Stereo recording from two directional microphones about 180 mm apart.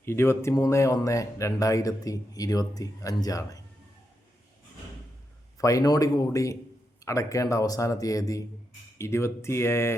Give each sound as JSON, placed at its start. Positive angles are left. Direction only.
{"t": 0.0, "sound": "speech", "side_deg": 15}
{"t": 5.5, "sound": "speech", "side_deg": 20}